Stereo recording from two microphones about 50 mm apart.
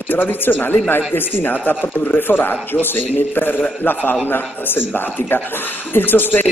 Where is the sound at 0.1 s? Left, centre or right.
Left.